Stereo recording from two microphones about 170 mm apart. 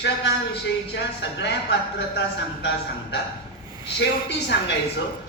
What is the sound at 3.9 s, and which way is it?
Speech, 90° left.